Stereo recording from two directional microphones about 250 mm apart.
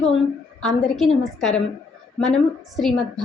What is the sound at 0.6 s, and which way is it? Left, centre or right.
A woman's voice, centre.